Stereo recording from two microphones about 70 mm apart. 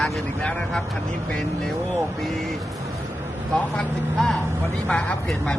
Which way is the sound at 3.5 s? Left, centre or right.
Centre.